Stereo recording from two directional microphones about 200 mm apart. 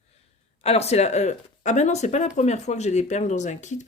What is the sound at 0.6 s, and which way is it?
Speech, 30° left (ahead or behind).